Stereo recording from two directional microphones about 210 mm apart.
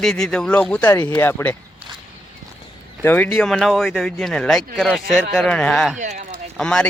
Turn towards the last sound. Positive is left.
turn(degrees=5)  # may be behind; listen again after turning